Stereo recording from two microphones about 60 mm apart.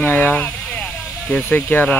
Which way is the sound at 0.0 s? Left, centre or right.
Left.